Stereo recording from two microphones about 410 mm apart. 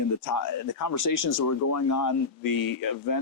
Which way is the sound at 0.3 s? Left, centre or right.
Left.